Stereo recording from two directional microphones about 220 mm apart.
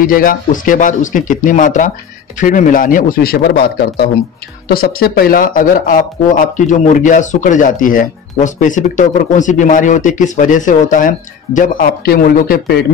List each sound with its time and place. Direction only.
0.0 s speech: 40° left (ahead or behind)